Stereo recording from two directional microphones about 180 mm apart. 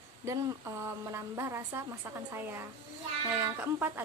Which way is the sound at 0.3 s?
15° right (ahead or behind).